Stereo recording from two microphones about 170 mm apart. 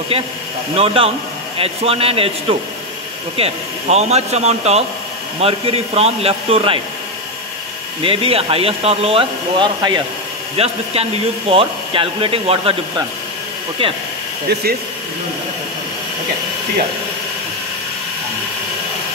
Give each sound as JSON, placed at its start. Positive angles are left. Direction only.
{"t": 0.7, "sound": "speech", "side_deg": -35}
{"t": 3.3, "sound": "speech", "side_deg": -35}
{"t": 8.0, "sound": "speech", "side_deg": -35}
{"t": 14.5, "sound": "speech", "side_deg": -65}